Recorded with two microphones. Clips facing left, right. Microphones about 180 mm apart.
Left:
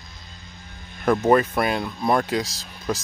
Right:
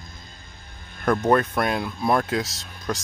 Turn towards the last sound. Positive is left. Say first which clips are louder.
# left 2 dB
turn(degrees=0)  # may be behind; listen again after turning